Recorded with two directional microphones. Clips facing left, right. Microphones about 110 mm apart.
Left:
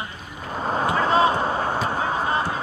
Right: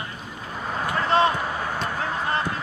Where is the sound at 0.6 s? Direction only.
35° left (ahead or behind).